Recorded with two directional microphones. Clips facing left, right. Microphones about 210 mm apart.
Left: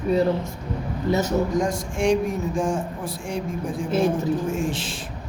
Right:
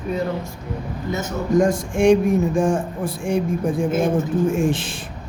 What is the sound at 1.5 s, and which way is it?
Speech, 50° right (ahead or behind).